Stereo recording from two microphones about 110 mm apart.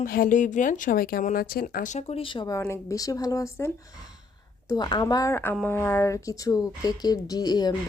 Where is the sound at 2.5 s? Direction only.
30° left (ahead or behind).